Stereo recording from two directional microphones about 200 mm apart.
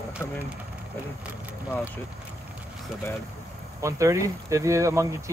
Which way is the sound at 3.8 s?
15° right (ahead or behind).